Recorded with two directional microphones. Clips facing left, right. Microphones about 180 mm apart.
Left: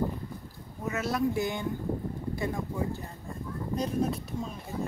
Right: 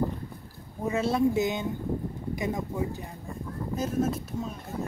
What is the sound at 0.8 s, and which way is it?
Speech, 30° right (ahead or behind).